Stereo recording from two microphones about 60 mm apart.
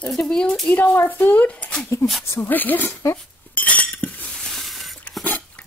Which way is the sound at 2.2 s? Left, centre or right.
Left.